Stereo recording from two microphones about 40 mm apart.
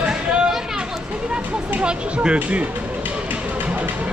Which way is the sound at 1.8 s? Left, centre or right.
Right.